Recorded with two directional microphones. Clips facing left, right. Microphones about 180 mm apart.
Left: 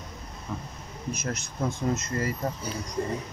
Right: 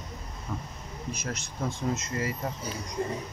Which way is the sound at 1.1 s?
45° left (ahead or behind).